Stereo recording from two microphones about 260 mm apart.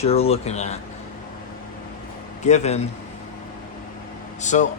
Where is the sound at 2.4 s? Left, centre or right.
Left.